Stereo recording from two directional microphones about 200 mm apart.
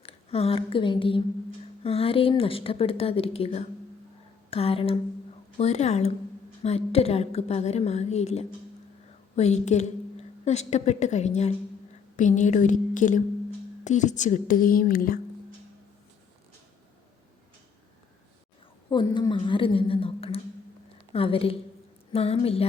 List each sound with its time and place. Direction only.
0.0 s a woman's voice: 30° left (ahead or behind); by 15.2 s 45° left (ahead or behind)
19.1 s a woman's voice: 25° left (ahead or behind)